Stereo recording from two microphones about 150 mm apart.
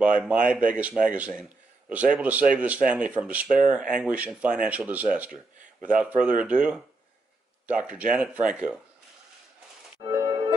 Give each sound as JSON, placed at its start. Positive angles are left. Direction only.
{"t": 0.0, "sound": "speech", "side_deg": -10}
{"t": 10.0, "sound": "music", "side_deg": -25}